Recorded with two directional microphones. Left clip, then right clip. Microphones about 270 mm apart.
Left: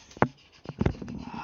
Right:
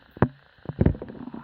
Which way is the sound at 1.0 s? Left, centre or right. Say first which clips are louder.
Right 3 dB; left.